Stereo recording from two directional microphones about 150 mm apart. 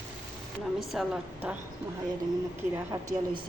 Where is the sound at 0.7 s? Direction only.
5° right (ahead or behind).